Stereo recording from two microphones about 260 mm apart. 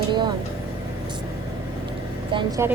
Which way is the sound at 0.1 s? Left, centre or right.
Centre.